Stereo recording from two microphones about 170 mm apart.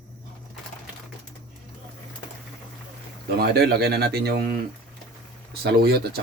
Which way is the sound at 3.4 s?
70° right (ahead or behind).